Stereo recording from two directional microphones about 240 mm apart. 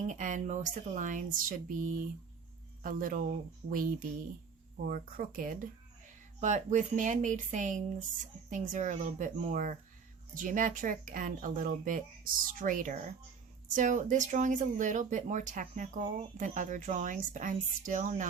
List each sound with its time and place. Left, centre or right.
0.1 s speech: right